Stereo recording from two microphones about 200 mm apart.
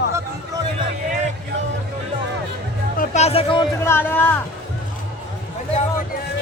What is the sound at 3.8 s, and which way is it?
Speech, 10° left (ahead or behind).